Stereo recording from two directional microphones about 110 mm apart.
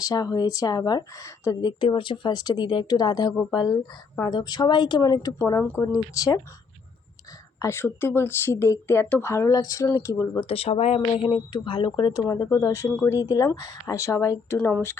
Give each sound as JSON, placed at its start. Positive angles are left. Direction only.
{"t": 0.0, "sound": "speech", "side_deg": 35}
{"t": 1.8, "sound": "speech", "side_deg": 50}
{"t": 7.6, "sound": "speech", "side_deg": 20}
{"t": 10.4, "sound": "speech", "side_deg": 60}
{"t": 11.3, "sound": "speech", "side_deg": 45}
{"t": 12.2, "sound": "speech", "side_deg": 30}